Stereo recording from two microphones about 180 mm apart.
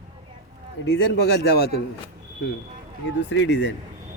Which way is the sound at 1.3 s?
65° left (ahead or behind).